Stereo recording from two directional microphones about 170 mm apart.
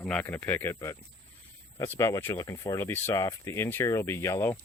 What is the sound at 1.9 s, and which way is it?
Speech, 15° left (ahead or behind).